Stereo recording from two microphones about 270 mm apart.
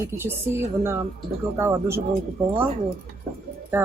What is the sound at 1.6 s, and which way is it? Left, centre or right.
Speech, centre.